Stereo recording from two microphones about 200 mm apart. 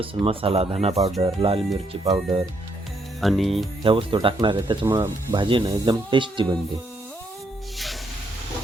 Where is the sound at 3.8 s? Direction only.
25° right (ahead or behind).